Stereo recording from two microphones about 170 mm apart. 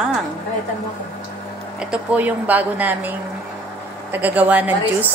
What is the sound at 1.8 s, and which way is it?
A woman's voice, 5° right (ahead or behind).